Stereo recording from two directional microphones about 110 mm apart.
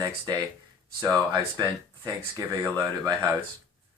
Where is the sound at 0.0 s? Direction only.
35° right (ahead or behind).